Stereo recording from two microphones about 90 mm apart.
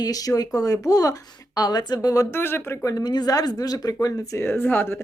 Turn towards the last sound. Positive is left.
turn(degrees=25)  # may be behind; listen again after turning